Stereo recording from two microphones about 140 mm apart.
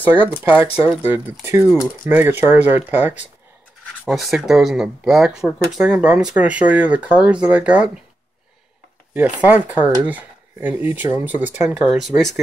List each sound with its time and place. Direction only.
0.1 s speech: 15° right (ahead or behind)
4.1 s speech: centre (ahead or behind)
9.4 s speech: 10° right (ahead or behind)